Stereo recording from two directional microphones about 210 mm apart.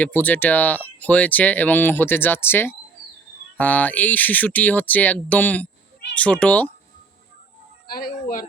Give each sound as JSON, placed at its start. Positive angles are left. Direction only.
{"t": 0.0, "sound": "speech", "side_deg": 5}
{"t": 7.9, "sound": "speech", "side_deg": 45}